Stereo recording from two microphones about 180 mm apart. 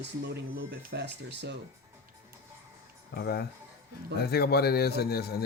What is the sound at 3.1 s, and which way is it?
A man's voice, 60° left (ahead or behind).